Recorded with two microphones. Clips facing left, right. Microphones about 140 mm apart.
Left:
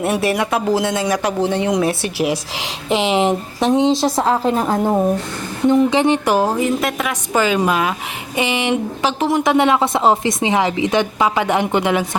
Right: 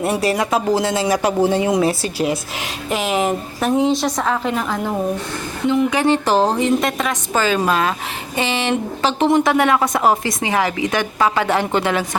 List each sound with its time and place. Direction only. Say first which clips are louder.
0.0 s speech: left 1 dB; centre (ahead or behind)
2.0 s speech: left 1 dB; 80° left
2.9 s a woman's voice: left 3 dB; 25° left (ahead or behind); by 9.4 s 5° left (ahead or behind)
9.4 s a woman's voice: left 1 dB; 20° left (ahead or behind)